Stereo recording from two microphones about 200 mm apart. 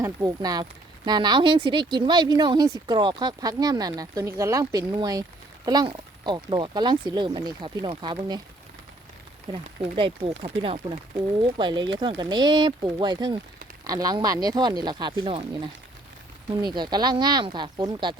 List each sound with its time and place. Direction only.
0.0 s speech: 15° right (ahead or behind)
9.5 s speech: 25° right (ahead or behind)
16.5 s speech: 20° right (ahead or behind)